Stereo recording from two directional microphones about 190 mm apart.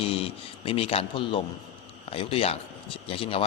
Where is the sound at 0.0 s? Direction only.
30° left (ahead or behind).